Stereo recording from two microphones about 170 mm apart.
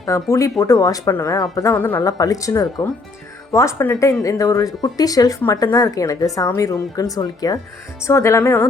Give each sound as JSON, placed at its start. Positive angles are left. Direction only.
{"t": 0.0, "sound": "speech", "side_deg": 15}